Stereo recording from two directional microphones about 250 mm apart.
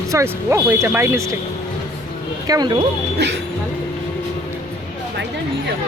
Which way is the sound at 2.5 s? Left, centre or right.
Centre.